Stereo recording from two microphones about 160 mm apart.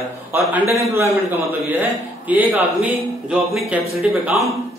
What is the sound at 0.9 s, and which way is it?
A man's voice, 15° right (ahead or behind).